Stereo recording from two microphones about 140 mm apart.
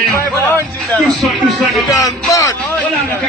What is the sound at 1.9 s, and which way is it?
Speech, 20° left (ahead or behind).